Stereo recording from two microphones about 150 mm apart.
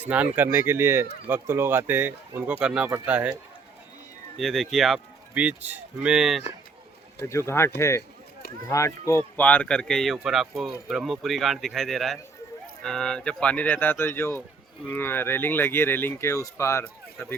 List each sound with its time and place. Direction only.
0.3 s speech: 15° right (ahead or behind)
4.4 s speech: centre (ahead or behind)
7.2 s speech: 20° left (ahead or behind)